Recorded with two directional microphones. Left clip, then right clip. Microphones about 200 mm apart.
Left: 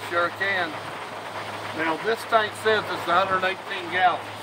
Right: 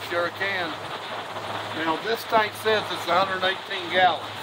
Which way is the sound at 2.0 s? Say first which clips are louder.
Left 1 dB; 20° right (ahead or behind).